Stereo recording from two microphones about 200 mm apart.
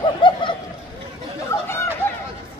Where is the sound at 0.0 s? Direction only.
25° left (ahead or behind).